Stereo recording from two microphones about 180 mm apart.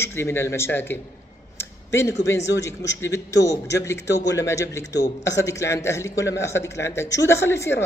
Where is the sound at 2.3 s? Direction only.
80° left.